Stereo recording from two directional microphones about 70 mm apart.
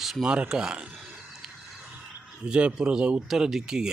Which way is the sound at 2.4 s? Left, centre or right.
Centre.